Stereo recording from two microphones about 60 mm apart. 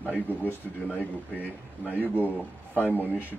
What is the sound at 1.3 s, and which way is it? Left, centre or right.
Speech, right.